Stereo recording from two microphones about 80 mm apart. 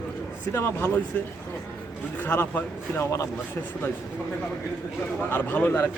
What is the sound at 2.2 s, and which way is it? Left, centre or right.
A man's voice, left.